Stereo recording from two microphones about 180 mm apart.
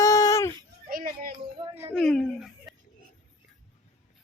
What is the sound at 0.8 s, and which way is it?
Children playing, 50° right (ahead or behind).